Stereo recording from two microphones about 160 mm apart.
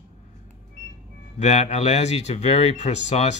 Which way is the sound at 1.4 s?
45° left (ahead or behind).